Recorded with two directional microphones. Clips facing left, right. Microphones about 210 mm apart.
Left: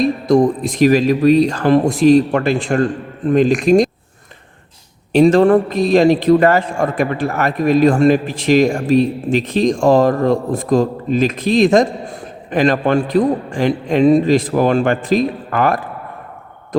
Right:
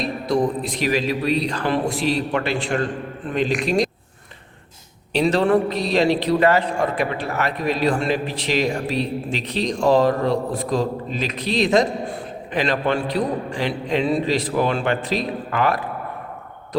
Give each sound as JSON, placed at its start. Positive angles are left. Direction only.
{"t": 0.0, "sound": "a man's voice", "side_deg": 45}
{"t": 5.1, "sound": "a man's voice", "side_deg": 50}